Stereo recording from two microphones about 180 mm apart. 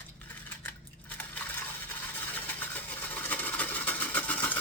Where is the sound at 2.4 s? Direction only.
10° left (ahead or behind).